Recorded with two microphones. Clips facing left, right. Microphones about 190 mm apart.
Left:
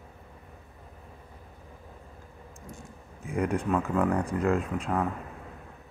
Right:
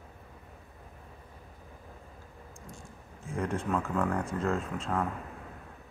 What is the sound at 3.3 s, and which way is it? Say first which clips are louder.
Speech: left 4 dB; centre (ahead or behind).